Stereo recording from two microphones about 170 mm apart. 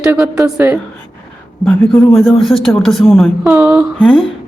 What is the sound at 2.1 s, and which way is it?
A man's voice, centre (ahead or behind).